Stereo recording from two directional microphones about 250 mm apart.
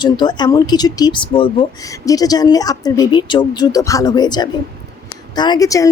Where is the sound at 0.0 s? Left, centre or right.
Centre.